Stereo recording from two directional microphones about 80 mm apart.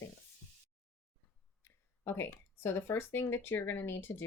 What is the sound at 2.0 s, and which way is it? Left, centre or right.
Speech, left.